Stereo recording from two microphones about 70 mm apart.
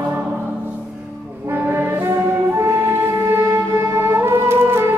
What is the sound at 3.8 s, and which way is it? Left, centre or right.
Music, right.